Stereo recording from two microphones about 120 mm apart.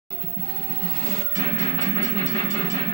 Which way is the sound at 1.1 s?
25° left (ahead or behind).